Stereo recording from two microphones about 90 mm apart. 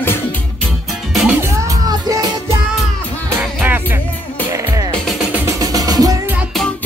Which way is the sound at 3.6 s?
20° right (ahead or behind).